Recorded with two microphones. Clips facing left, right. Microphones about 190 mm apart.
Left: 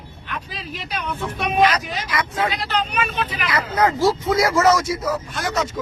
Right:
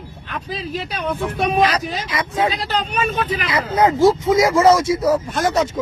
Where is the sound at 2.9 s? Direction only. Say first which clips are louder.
Right 4 dB; 40° right (ahead or behind).